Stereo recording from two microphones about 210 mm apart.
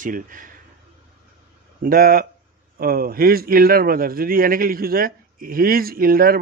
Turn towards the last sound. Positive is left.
turn(degrees=-45)  # may be behind; listen again after turning